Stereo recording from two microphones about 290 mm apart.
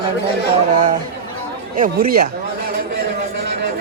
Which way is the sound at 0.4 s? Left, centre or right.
Right.